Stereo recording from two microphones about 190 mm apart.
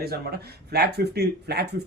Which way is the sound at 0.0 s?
55° right (ahead or behind).